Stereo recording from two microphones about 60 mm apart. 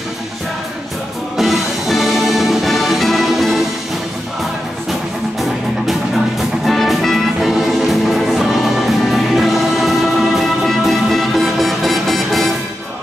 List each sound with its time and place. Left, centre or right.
1.3 s music: centre
6.6 s music: centre